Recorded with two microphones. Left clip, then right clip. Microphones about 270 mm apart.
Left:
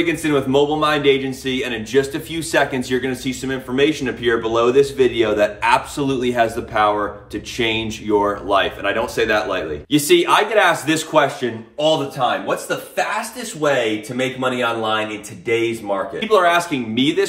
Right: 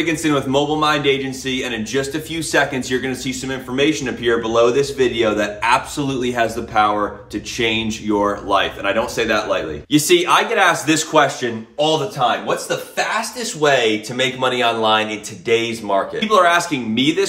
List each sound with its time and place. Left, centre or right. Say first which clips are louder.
0.0 s speech: even; centre